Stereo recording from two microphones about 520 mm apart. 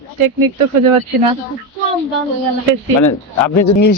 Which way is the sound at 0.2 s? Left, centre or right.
Right.